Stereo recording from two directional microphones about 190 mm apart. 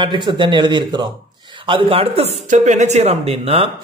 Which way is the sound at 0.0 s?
25° right (ahead or behind).